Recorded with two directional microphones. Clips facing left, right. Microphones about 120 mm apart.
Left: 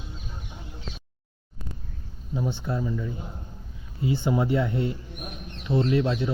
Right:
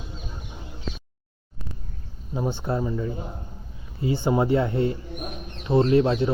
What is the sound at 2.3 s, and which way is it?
Speech, 40° right (ahead or behind).